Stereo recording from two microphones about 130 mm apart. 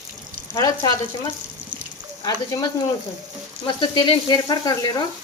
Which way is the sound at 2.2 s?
30° left (ahead or behind).